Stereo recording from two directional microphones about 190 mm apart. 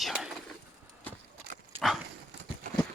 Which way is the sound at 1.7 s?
30° right (ahead or behind).